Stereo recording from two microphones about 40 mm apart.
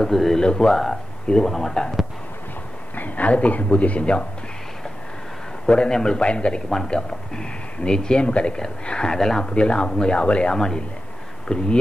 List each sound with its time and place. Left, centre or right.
0.0 s speech: centre
0.4 s speech: centre
3.0 s speech: left
5.7 s speech: centre
9.5 s speech: left
10.5 s speech: centre